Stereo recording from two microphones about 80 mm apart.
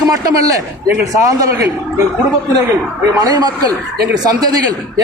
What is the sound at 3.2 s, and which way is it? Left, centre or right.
Speech, right.